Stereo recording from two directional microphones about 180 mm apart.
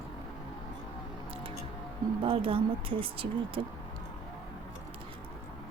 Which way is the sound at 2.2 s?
30° right (ahead or behind).